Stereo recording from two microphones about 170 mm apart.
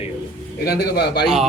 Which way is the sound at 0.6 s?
70° left (ahead or behind).